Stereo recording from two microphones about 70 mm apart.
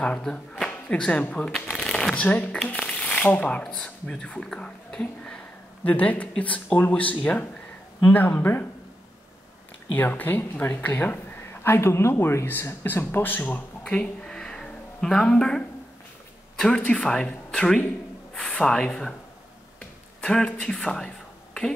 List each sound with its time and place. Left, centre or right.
0.0 s speech: centre
0.7 s a sound: centre
1.9 s shuffling cards: centre
2.2 s speech: left
9.9 s speech: left
11.6 s speech: left; by 21.1 s centre